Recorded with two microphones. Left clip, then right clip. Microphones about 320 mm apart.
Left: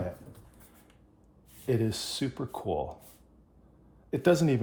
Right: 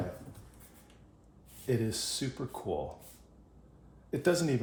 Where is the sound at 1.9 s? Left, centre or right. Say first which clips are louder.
Left 2 dB; centre.